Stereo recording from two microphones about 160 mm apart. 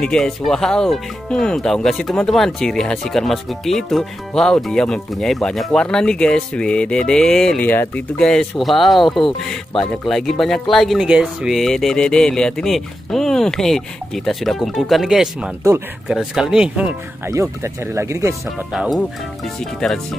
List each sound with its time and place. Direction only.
0.0 s speech: 5° left (ahead or behind)
17.3 s speech: 15° right (ahead or behind)
18.7 s speech: 5° right (ahead or behind)